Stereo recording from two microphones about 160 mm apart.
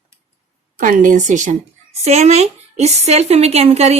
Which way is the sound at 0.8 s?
55° right (ahead or behind).